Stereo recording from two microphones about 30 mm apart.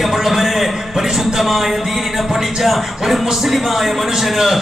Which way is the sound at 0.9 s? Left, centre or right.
Centre.